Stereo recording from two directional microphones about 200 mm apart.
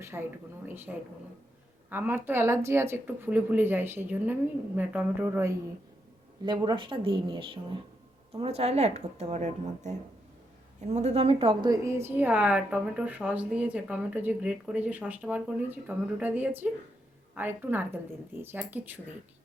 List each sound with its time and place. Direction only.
0.0 s a woman's voice: 10° right (ahead or behind)